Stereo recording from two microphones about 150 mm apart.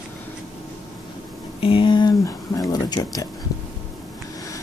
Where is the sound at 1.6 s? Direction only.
35° left (ahead or behind).